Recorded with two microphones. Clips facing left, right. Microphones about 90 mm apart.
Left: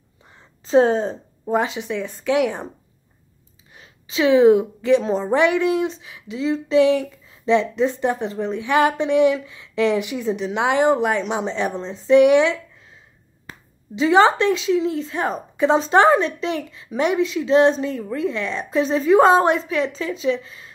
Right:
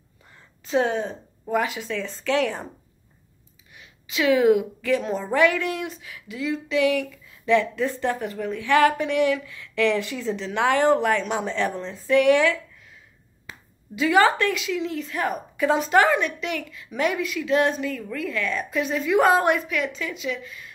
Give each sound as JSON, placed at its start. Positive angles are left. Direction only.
{"t": 0.7, "sound": "a woman's voice", "side_deg": 35}
{"t": 3.7, "sound": "a woman's voice", "side_deg": 30}
{"t": 13.5, "sound": "finger snapping", "side_deg": 45}
{"t": 13.9, "sound": "a woman's voice", "side_deg": 25}